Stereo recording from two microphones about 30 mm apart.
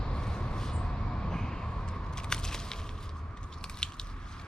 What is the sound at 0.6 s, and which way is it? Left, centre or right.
Vehicle, left.